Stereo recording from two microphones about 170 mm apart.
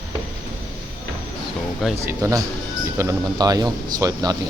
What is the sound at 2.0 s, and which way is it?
Speech, 15° right (ahead or behind).